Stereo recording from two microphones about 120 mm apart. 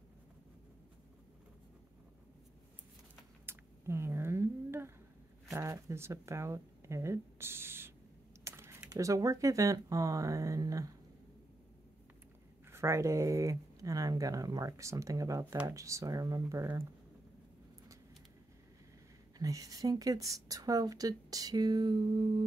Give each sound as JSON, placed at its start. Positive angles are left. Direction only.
{"t": 3.4, "sound": "a sound", "side_deg": -20}
{"t": 5.5, "sound": "speech", "side_deg": -25}
{"t": 8.5, "sound": "typing", "side_deg": -20}
{"t": 8.9, "sound": "speech", "side_deg": -30}
{"t": 12.7, "sound": "speech", "side_deg": -25}
{"t": 19.3, "sound": "speech", "side_deg": -30}